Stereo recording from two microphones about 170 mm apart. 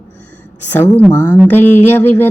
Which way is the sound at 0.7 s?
10° left (ahead or behind).